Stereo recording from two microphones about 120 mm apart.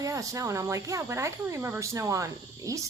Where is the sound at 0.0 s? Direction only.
30° right (ahead or behind).